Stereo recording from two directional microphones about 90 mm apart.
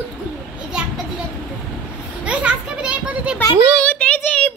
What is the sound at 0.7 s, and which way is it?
Children playing, 10° right (ahead or behind).